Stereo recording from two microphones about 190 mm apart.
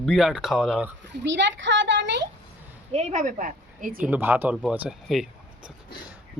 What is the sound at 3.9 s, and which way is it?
A man's voice, 10° right (ahead or behind).